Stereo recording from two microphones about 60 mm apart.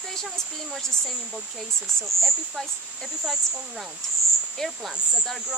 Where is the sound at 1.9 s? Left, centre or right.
Centre.